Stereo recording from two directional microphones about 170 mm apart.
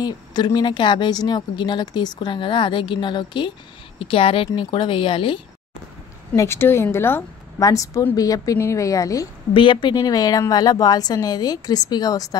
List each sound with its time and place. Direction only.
0.0 s speech: 25° left (ahead or behind)
6.3 s speech: 15° left (ahead or behind)
9.5 s speech: 30° left (ahead or behind)